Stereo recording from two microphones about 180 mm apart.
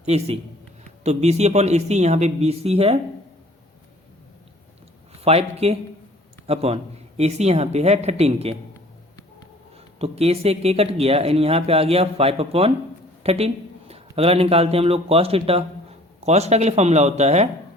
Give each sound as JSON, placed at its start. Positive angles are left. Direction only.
{"t": 0.0, "sound": "speech", "side_deg": -35}
{"t": 5.2, "sound": "speech", "side_deg": -35}
{"t": 9.7, "sound": "a man's voice", "side_deg": -35}